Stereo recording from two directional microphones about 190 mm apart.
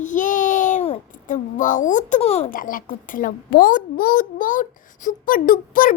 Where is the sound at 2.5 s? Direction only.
45° left (ahead or behind).